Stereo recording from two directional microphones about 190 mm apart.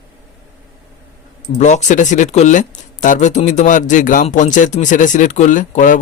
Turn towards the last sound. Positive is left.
turn(degrees=45)  # may be behind; listen again after turning